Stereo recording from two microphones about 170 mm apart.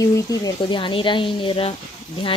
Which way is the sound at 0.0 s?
20° left (ahead or behind).